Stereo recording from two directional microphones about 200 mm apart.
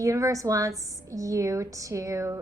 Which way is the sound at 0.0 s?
15° right (ahead or behind).